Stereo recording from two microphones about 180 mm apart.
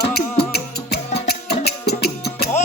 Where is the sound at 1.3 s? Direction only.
60° left (ahead or behind).